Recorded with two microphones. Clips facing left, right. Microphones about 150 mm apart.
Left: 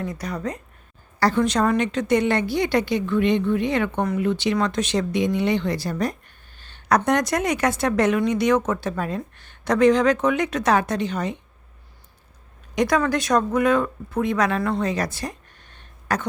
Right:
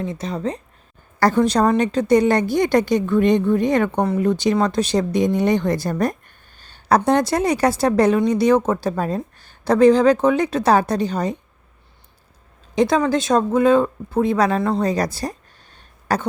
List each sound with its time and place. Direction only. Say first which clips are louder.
0.0 s speech: right 3 dB; 25° right (ahead or behind)
1.2 s speech: right 4 dB; 40° right (ahead or behind)
12.7 s speech: right 3 dB; 25° right (ahead or behind)